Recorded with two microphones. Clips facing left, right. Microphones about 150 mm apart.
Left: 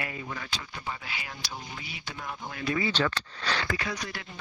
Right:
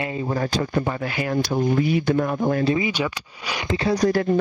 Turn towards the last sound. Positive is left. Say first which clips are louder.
# right 16 dB
turn(degrees=-40)  # may be behind; listen again after turning